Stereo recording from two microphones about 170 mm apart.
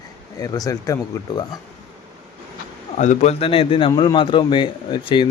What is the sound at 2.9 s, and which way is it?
A man's voice, 45° left (ahead or behind).